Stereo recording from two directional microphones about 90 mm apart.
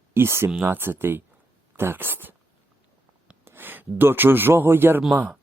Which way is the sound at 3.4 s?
25° right (ahead or behind).